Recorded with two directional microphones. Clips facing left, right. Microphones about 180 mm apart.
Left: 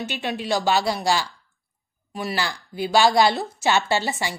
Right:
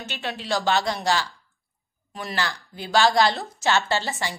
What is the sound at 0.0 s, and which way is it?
A woman's voice, 15° left (ahead or behind).